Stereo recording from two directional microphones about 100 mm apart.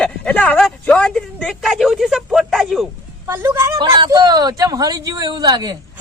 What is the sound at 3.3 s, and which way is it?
Speech, 25° right (ahead or behind).